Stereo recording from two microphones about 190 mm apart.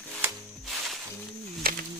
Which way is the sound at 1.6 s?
50° right (ahead or behind).